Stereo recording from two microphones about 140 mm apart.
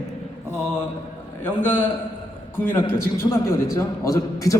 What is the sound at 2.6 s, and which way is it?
A man's voice, 15° left (ahead or behind).